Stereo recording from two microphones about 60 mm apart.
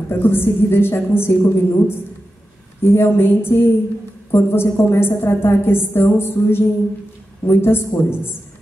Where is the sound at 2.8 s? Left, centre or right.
Left.